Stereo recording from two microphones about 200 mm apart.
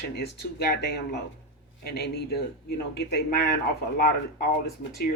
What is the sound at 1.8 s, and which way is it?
Speech, 50° left (ahead or behind).